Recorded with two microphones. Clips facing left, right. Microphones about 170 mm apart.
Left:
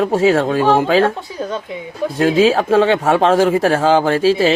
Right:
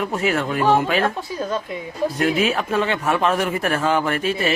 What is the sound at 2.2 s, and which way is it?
Speech, 90° left.